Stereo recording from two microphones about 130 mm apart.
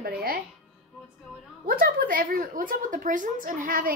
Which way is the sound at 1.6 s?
90° right.